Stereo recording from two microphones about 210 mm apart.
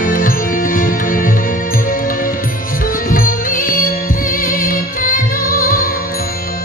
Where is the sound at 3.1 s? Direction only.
40° left (ahead or behind).